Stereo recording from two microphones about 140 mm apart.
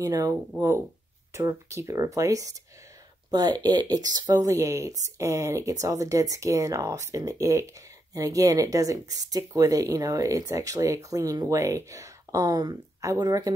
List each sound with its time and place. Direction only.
0.0 s speech: 25° right (ahead or behind)